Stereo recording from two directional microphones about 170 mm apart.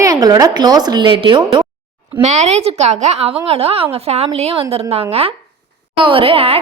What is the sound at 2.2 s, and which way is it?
A woman's voice, 40° right (ahead or behind).